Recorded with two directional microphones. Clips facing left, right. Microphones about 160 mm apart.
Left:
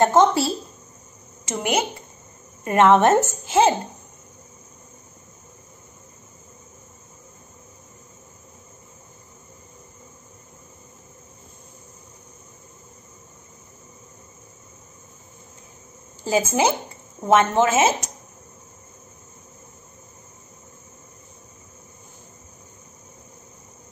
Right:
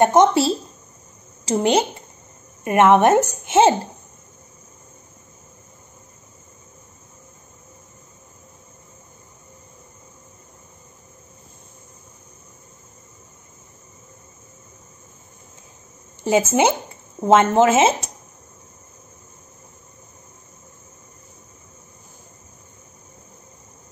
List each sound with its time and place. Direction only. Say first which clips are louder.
0.0 s speech: right 2 dB; 20° right (ahead or behind)
2.6 s a woman's voice: right 1 dB; 15° right (ahead or behind)
16.3 s speech: right 3 dB; 25° right (ahead or behind)